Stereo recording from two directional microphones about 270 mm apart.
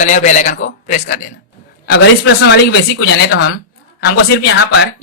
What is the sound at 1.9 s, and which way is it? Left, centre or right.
Speech, left.